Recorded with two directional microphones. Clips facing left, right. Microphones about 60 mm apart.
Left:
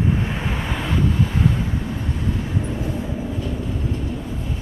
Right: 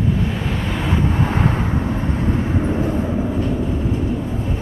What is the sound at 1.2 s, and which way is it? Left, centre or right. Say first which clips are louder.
Vehicle: right 2 dB; right.